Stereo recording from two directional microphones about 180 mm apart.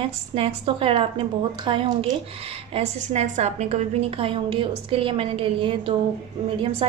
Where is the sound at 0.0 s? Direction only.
30° right (ahead or behind).